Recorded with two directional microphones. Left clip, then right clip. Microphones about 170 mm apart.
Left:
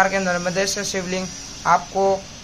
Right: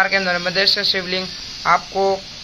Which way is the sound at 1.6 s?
5° right (ahead or behind).